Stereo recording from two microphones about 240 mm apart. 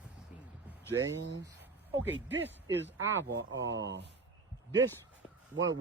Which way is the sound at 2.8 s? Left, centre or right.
Right.